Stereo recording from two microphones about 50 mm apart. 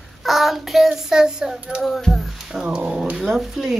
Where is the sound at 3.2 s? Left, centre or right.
Centre.